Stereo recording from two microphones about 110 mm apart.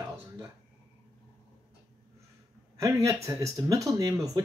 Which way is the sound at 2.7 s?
30° right (ahead or behind).